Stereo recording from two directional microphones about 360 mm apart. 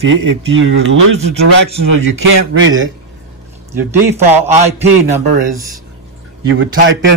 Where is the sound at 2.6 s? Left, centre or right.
Right.